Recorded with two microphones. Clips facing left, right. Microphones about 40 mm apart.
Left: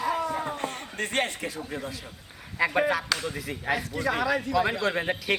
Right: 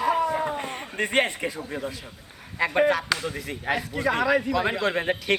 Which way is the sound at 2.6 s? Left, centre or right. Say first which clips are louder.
Right 3 dB; centre.